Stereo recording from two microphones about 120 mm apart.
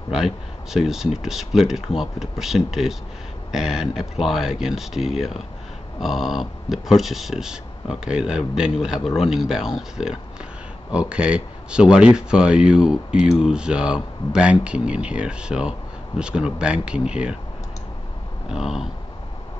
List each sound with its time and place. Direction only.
0.1 s speech: 5° right (ahead or behind)
18.5 s speech: 5° right (ahead or behind)